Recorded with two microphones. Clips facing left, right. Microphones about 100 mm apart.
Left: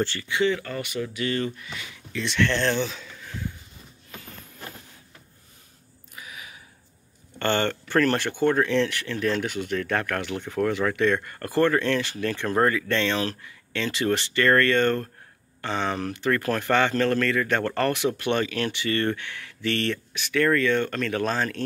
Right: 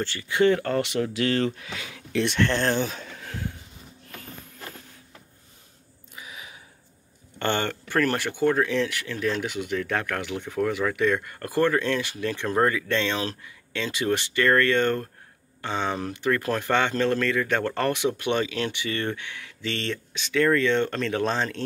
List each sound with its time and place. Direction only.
0.3 s speech: 50° right (ahead or behind); by 2.2 s 90° right
2.2 s speech: 45° right (ahead or behind); by 3.5 s 65° right (ahead or behind)
6.1 s a sound: 20° right (ahead or behind)
7.3 s speech: 15° right (ahead or behind)